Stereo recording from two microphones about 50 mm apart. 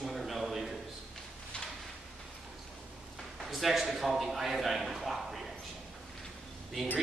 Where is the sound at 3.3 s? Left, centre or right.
Centre.